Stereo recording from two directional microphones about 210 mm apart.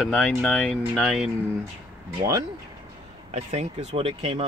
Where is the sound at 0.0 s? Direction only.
5° left (ahead or behind).